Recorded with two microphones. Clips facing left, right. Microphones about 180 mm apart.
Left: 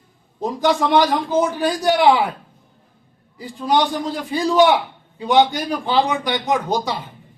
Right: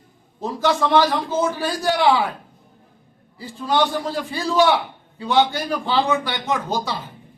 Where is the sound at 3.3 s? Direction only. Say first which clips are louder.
Left 2 dB; 15° left (ahead or behind).